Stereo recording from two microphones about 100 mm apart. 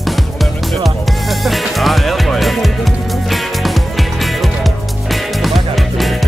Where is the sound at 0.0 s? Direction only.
Centre (ahead or behind).